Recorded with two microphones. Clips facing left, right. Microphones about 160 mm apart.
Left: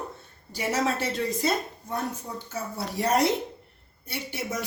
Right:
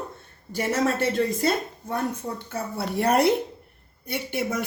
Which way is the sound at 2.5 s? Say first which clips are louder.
Right 3 dB; 60° right (ahead or behind).